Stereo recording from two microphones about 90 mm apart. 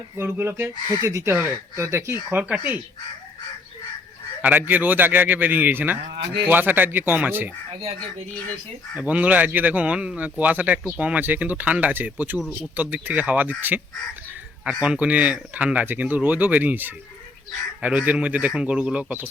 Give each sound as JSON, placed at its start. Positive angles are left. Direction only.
{"t": 0.2, "sound": "speech", "side_deg": -25}
{"t": 2.4, "sound": "speech", "side_deg": -15}
{"t": 4.4, "sound": "speech", "side_deg": -20}
{"t": 9.0, "sound": "speech", "side_deg": -15}